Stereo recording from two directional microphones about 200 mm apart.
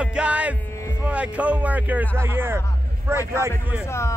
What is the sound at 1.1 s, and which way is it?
A man's voice, 5° right (ahead or behind).